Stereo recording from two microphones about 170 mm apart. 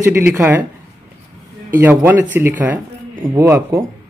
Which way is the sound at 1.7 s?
10° right (ahead or behind).